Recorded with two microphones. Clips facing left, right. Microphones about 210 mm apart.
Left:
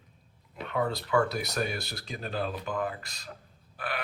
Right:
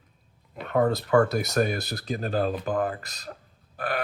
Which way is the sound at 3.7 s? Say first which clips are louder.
Right 6 dB; 45° right (ahead or behind).